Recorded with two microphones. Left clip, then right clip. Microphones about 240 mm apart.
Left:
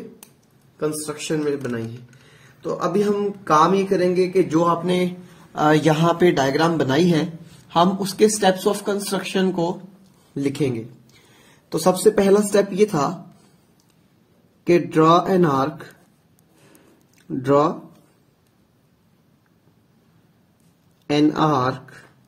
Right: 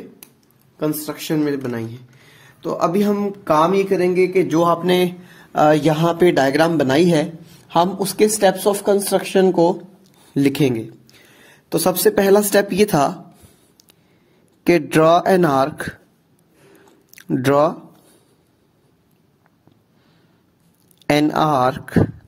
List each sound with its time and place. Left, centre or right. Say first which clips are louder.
0.7 s a woman's voice: right 2 dB; right
10.3 s speech: right 6 dB; right
14.6 s speech: right 2 dB; right
17.1 s speech: right 2 dB; right
21.1 s speech: right 2 dB; right